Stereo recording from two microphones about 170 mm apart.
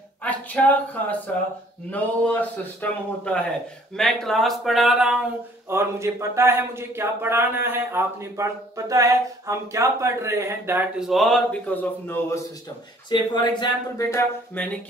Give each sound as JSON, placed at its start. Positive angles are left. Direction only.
{"t": 0.2, "sound": "a man's voice", "side_deg": 10}
{"t": 5.7, "sound": "speech", "side_deg": -15}
{"t": 13.1, "sound": "speech", "side_deg": 25}